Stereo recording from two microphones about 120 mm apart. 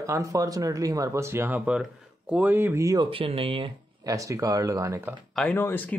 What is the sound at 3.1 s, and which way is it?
Speech, 50° right (ahead or behind).